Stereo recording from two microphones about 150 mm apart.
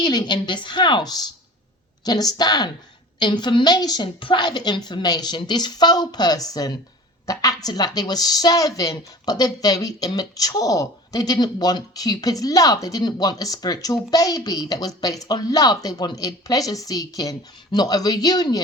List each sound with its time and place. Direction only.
0.0 s a woman's voice: 30° left (ahead or behind)